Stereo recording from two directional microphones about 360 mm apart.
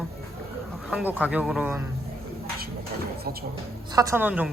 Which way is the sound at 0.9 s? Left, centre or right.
Centre.